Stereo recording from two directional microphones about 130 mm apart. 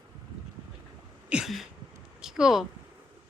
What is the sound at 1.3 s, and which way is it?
Sneeze, 5° right (ahead or behind).